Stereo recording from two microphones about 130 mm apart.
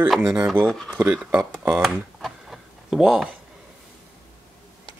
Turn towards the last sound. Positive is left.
turn(degrees=-5)  # may be behind; listen again after turning